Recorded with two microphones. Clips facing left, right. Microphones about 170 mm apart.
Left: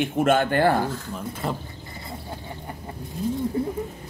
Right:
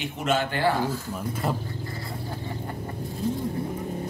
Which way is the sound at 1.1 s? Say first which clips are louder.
Right 1 dB; 5° right (ahead or behind).